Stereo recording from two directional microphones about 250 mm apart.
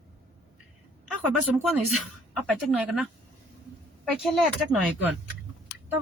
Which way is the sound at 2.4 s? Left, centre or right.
Centre.